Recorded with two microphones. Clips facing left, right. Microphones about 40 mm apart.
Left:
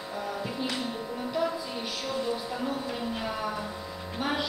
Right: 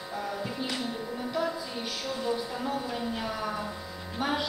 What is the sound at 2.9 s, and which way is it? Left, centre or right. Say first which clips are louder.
Speech: even; centre.